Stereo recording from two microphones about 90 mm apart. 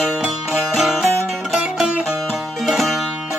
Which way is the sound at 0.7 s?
Centre (ahead or behind).